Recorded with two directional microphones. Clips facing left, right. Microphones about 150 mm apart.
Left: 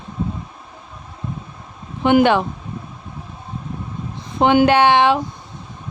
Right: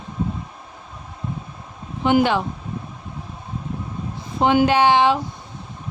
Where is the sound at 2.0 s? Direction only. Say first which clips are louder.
Left 4 dB; 65° left (ahead or behind).